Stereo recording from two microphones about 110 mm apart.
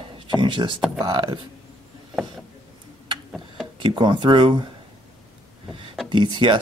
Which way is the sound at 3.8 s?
45° right (ahead or behind).